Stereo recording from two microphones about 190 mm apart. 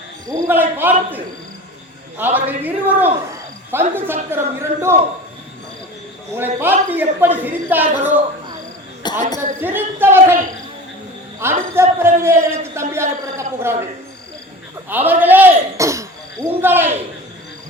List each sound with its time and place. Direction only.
0.3 s a woman's voice: 15° right (ahead or behind)
6.3 s a woman's voice: 10° right (ahead or behind)
9.0 s a sound: 20° left (ahead or behind)
9.6 s a woman's voice: 10° right (ahead or behind)
14.8 s speech: 10° right (ahead or behind)